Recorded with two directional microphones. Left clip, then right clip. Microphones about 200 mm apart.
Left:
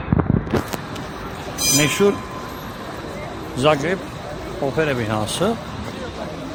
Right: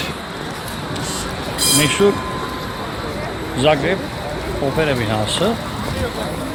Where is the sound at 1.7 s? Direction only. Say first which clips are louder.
Right 2 dB; 25° left (ahead or behind).